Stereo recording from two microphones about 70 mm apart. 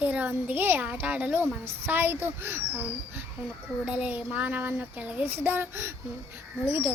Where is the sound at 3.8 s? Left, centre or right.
Centre.